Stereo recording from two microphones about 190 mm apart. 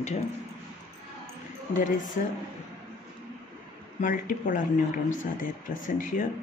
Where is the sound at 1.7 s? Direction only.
40° left (ahead or behind).